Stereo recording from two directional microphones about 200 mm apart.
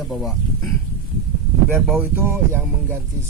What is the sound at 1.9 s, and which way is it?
Chant, 10° right (ahead or behind).